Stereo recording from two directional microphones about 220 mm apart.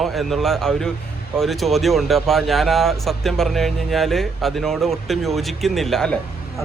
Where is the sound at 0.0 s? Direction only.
Centre (ahead or behind).